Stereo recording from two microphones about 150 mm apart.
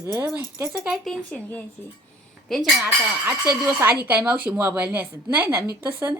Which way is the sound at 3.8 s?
15° right (ahead or behind).